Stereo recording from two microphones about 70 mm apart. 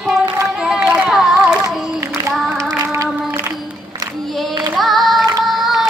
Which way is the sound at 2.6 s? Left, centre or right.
Right.